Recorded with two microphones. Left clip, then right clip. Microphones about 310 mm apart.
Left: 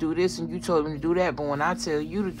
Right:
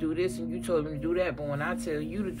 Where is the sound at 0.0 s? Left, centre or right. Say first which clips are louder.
Left 4 dB; centre.